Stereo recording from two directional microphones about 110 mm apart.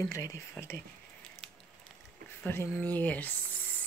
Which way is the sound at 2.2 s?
20° left (ahead or behind).